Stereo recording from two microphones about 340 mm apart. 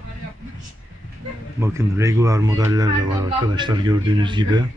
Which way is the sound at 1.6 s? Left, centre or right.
Centre.